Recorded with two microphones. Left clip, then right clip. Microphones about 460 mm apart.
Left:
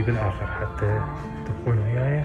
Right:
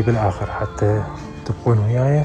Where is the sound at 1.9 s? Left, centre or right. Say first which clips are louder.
Right 7 dB; right.